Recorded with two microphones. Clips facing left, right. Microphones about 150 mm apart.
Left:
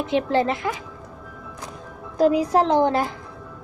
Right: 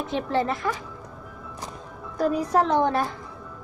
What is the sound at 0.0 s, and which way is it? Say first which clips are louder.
Speech: left 4 dB; 85° left.